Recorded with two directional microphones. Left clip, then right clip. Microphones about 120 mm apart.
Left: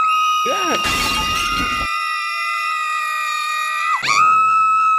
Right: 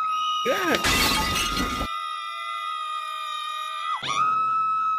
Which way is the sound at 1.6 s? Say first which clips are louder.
Left 8 dB; 30° left (ahead or behind).